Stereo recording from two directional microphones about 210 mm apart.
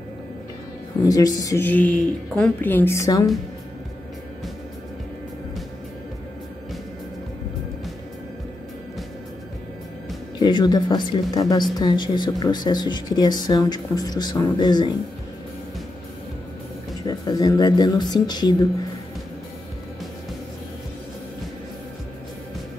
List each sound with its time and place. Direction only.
1.0 s a woman's voice: 15° left (ahead or behind)
10.4 s speech: 20° left (ahead or behind)
17.0 s speech: 20° left (ahead or behind)